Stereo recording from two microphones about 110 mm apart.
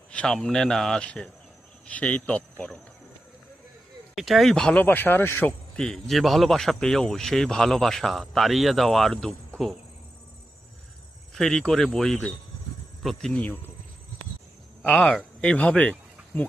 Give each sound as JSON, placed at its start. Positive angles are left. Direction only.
{"t": 0.1, "sound": "speech", "side_deg": 10}
{"t": 4.1, "sound": "speech", "side_deg": 0}
{"t": 4.8, "sound": "speech", "side_deg": 20}
{"t": 5.7, "sound": "speech", "side_deg": 5}
{"t": 11.3, "sound": "speech", "side_deg": 5}
{"t": 13.3, "sound": "speech", "side_deg": 15}
{"t": 14.8, "sound": "speech", "side_deg": 5}